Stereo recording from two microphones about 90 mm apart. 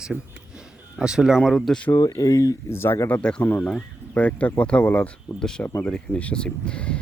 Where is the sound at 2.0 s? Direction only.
40° left (ahead or behind); by 3.2 s 25° left (ahead or behind).